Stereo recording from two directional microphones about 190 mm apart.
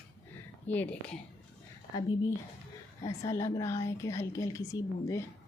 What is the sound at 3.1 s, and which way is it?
A woman's voice, 15° left (ahead or behind).